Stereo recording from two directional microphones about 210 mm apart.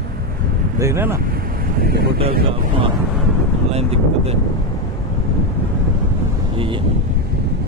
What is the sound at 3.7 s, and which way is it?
Speech, 30° right (ahead or behind).